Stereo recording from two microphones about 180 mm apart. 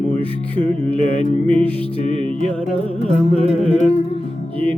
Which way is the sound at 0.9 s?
30° right (ahead or behind).